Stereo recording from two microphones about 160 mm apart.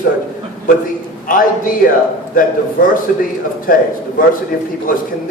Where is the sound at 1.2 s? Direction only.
60° left (ahead or behind).